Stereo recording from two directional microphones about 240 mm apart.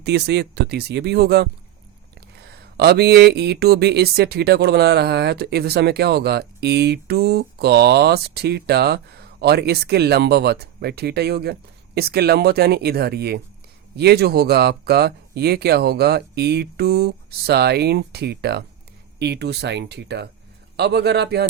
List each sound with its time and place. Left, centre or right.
0.0 s speech: right